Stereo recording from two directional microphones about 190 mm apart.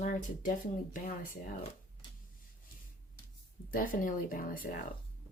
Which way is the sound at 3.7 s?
45° left (ahead or behind).